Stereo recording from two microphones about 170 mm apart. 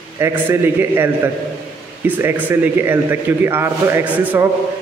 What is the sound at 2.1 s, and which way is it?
A man's voice, 10° right (ahead or behind).